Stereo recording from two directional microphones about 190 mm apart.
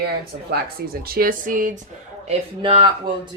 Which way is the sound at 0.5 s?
55° right (ahead or behind).